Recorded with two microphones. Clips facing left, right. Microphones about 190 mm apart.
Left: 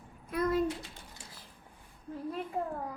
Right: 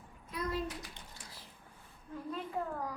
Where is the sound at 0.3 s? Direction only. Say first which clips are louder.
Left 8 dB; 55° left (ahead or behind).